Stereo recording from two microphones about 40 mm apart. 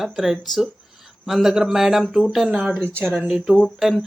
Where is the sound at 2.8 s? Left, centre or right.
Right.